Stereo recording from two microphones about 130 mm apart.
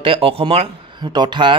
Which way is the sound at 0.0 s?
45° right (ahead or behind).